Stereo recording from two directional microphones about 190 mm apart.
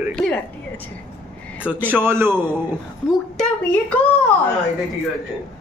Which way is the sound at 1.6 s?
10° right (ahead or behind).